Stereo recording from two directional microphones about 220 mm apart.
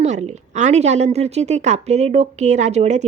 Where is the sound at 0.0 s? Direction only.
30° right (ahead or behind).